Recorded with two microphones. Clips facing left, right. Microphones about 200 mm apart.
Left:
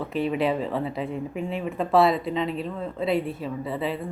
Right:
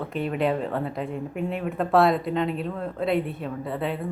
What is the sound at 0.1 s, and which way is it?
Speech, centre (ahead or behind).